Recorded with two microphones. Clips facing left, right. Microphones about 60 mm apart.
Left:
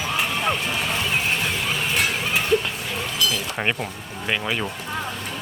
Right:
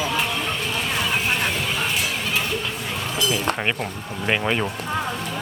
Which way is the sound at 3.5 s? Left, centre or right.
Centre.